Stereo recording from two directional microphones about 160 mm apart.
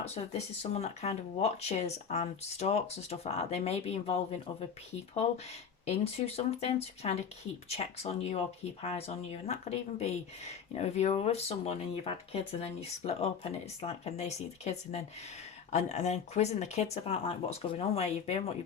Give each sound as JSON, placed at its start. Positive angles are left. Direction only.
{"t": 0.6, "sound": "speech", "side_deg": 40}
{"t": 5.8, "sound": "speech", "side_deg": 40}